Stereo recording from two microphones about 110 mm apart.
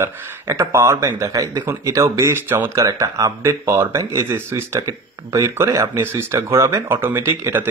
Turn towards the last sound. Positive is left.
turn(degrees=-20)  # may be behind; listen again after turning